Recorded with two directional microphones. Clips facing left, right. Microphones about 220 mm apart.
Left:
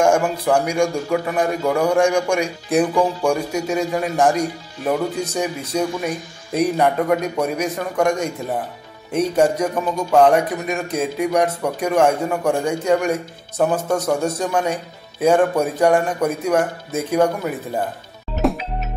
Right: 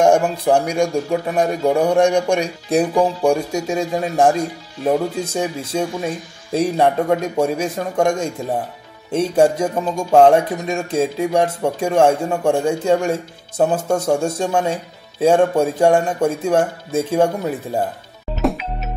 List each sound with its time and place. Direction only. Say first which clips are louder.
0.5 s speech: right 2 dB; 30° right (ahead or behind)